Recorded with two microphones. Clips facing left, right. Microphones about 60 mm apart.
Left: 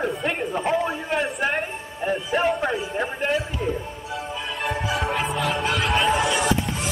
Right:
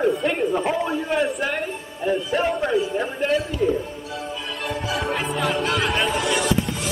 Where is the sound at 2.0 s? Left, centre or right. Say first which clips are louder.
Right 2 dB; left.